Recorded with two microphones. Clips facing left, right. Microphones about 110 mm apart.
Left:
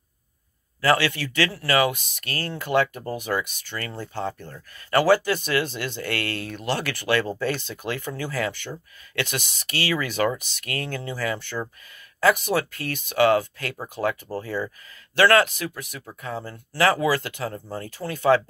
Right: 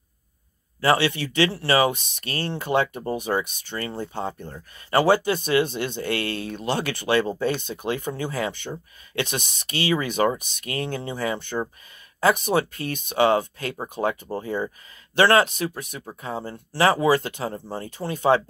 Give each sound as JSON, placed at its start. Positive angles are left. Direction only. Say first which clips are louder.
{"t": 0.7, "sound": "speech", "louder": "right 1 dB", "side_deg": -25}